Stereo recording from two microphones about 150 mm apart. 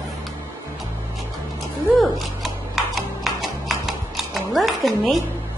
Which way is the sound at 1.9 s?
Centre (ahead or behind).